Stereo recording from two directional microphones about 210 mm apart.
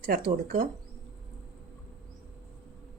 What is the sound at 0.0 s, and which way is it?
Speech, 40° right (ahead or behind).